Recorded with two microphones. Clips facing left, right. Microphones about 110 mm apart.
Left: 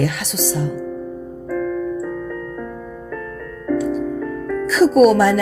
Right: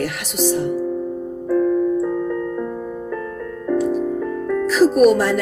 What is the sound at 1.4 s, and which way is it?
Music, 25° right (ahead or behind).